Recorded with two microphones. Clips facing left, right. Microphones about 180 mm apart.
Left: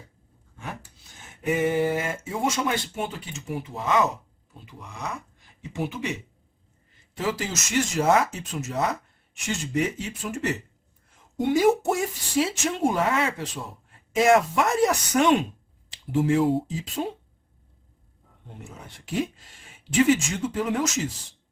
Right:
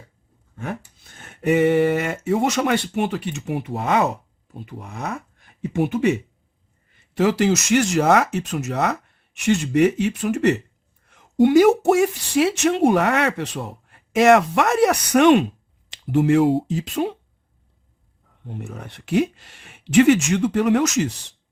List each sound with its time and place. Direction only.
0.5 s a sound: 55° right (ahead or behind)
7.1 s speech: 70° right (ahead or behind)
18.4 s speech: 65° right (ahead or behind)